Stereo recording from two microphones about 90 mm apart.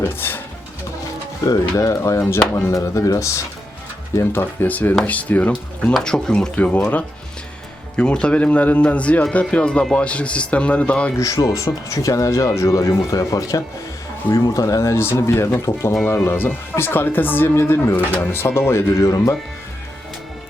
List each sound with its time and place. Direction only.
0.0 s speech: 25° left (ahead or behind)
1.5 s speech: 40° left (ahead or behind); by 11.1 s 15° left (ahead or behind)
11.2 s speech: 40° left (ahead or behind)
16.0 s speech: 25° left (ahead or behind)
17.9 s speech: 15° left (ahead or behind)
18.3 s speech: 30° left (ahead or behind)
18.9 s speech: 40° left (ahead or behind)